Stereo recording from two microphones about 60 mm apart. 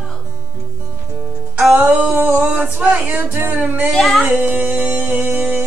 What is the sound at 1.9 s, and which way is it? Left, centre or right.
Humming, right.